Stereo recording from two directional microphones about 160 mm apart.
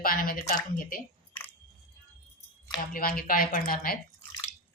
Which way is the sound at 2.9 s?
65° left (ahead or behind).